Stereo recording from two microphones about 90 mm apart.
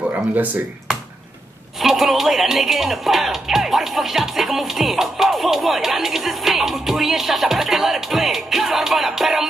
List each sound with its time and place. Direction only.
0.4 s speech: 15° right (ahead or behind)
1.8 s speech: 5° right (ahead or behind)